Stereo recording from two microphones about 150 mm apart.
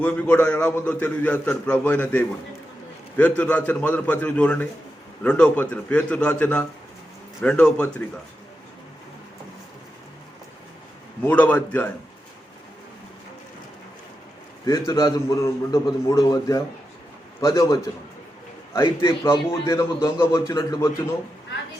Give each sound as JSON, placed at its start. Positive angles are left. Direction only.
{"t": 0.0, "sound": "a man's voice", "side_deg": 10}
{"t": 11.2, "sound": "a man's voice", "side_deg": 10}
{"t": 14.7, "sound": "a man's voice", "side_deg": 25}